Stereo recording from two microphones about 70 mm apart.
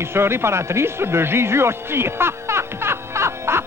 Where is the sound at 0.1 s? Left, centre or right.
Right.